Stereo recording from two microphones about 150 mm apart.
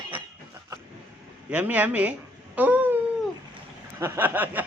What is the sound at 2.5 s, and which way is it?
Cat, 10° right (ahead or behind).